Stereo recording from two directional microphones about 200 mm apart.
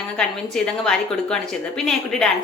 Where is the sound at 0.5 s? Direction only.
5° left (ahead or behind).